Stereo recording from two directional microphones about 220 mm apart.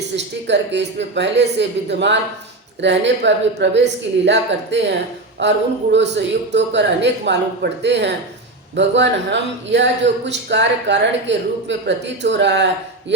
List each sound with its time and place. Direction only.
0.4 s speech: 50° right (ahead or behind)